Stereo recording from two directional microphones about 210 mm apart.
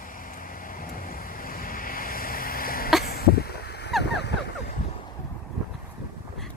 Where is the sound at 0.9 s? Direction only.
45° left (ahead or behind).